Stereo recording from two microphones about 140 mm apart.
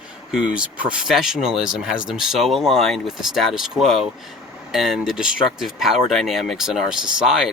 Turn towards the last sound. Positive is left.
turn(degrees=-5)  # may be behind; listen again after turning